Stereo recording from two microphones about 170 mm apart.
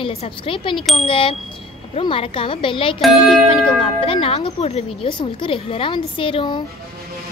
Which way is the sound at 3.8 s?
35° left (ahead or behind).